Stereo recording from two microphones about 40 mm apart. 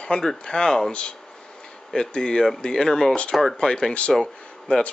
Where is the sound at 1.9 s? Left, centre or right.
Left.